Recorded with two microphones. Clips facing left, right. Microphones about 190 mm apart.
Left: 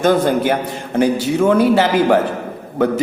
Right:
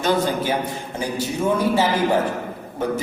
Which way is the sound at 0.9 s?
85° left.